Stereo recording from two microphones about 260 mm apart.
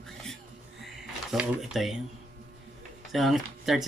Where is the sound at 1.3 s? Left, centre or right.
Centre.